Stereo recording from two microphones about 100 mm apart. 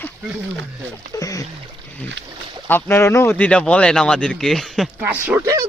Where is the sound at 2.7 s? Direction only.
20° left (ahead or behind).